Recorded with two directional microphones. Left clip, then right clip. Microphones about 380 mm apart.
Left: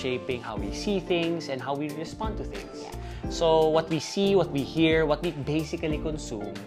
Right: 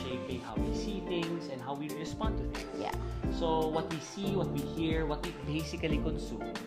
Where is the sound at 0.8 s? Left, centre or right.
Left.